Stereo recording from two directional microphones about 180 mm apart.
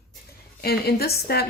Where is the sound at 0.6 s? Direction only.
60° left (ahead or behind).